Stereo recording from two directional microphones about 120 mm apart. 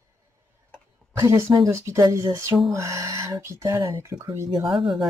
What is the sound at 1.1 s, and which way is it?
Speech, 25° right (ahead or behind).